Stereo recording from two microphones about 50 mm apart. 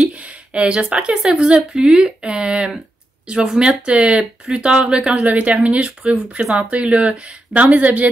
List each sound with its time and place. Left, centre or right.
0.1 s a sound: right
1.1 s speech: centre
5.2 s speech: right